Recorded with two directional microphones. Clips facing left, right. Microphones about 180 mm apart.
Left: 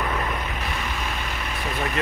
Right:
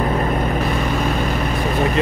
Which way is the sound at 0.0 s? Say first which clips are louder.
Right 8 dB; 40° right (ahead or behind).